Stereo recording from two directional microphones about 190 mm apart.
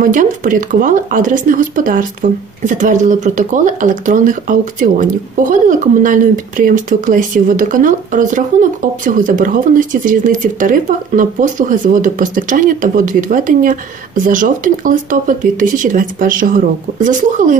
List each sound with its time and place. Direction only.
0.0 s speech: 45° right (ahead or behind)